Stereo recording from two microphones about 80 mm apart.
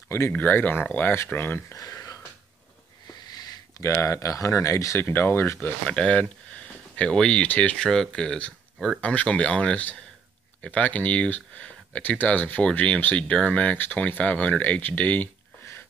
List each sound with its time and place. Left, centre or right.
0.3 s speech: left
1.8 s a sound: left
3.3 s a sound: left
3.8 s speech: left
5.9 s speech: centre
7.9 s speech: centre